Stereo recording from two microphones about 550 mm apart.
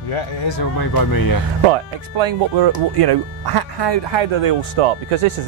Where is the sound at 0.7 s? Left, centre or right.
Left.